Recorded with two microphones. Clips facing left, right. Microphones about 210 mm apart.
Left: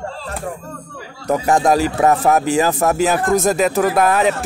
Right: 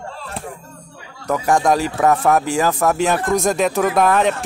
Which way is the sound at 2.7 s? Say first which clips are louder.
Left 1 dB; 20° left (ahead or behind).